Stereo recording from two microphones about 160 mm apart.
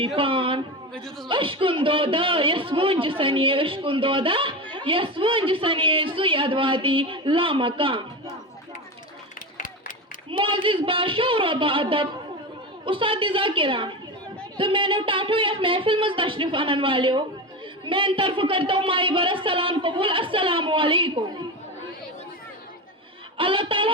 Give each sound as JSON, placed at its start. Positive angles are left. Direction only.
{"t": 0.2, "sound": "a sound", "side_deg": -35}
{"t": 1.3, "sound": "a man's voice", "side_deg": -35}
{"t": 10.3, "sound": "a man's voice", "side_deg": -30}
{"t": 23.4, "sound": "a man's voice", "side_deg": -35}